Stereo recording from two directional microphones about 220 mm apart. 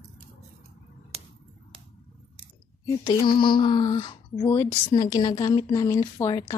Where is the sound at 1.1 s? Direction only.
30° right (ahead or behind).